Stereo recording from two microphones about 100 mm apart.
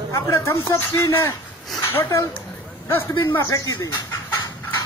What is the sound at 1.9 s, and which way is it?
Speech, 25° left (ahead or behind).